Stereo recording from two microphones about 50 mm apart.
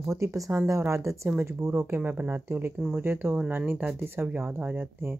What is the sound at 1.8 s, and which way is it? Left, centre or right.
Speech, right.